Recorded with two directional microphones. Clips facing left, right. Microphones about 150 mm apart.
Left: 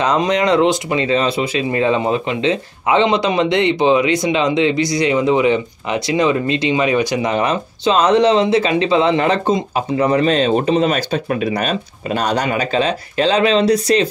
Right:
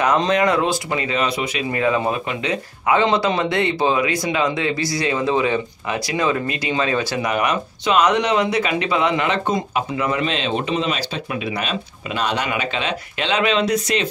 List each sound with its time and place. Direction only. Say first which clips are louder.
0.0 s speech: left 2 dB; 20° left (ahead or behind)
7.2 s speech: left 3 dB; 30° left (ahead or behind)